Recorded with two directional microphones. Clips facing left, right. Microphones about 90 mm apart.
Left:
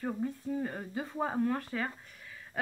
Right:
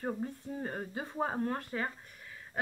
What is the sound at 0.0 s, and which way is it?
Speech, 35° right (ahead or behind).